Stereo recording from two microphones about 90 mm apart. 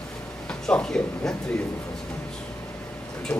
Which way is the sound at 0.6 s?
5° left (ahead or behind).